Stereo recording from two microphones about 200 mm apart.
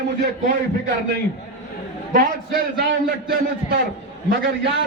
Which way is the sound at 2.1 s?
45° right (ahead or behind).